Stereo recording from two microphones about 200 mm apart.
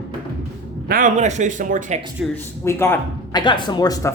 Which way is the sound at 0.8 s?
45° right (ahead or behind).